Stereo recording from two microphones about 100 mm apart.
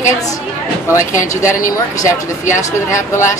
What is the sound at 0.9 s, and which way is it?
Speech, 30° left (ahead or behind).